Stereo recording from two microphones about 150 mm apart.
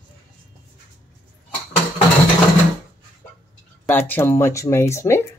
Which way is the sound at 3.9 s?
15° left (ahead or behind).